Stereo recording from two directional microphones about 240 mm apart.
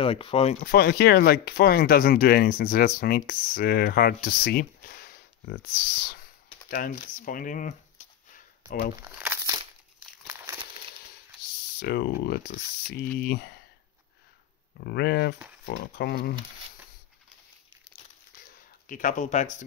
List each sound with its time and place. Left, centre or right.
0.0 s speech: left
0.7 s speech: left
6.7 s a sound: left
8.9 s crumpling: centre
11.8 s speech: left
14.8 s speech: left
18.9 s speech: left